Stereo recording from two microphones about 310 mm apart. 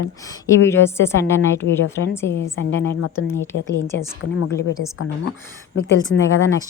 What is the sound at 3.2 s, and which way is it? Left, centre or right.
Speech, centre.